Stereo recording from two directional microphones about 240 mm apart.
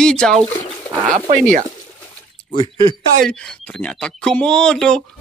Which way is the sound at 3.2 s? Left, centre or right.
Centre.